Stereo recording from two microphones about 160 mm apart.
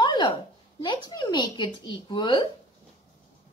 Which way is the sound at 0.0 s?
30° left (ahead or behind).